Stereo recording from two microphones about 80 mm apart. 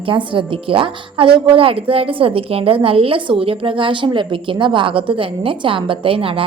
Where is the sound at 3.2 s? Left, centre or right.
Right.